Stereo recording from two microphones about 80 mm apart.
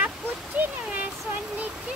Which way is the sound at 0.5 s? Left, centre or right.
Right.